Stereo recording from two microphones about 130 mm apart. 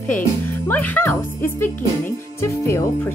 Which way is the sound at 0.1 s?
15° left (ahead or behind).